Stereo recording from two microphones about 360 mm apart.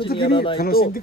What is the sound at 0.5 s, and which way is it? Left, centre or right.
Speech, left.